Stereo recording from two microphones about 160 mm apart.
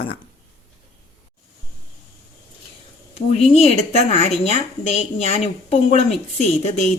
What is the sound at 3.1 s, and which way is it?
Speech, 40° left (ahead or behind).